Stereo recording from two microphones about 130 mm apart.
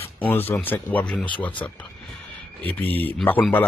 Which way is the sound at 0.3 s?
15° left (ahead or behind).